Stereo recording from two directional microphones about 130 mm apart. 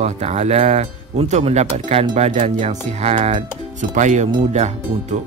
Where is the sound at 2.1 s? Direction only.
65° right (ahead or behind).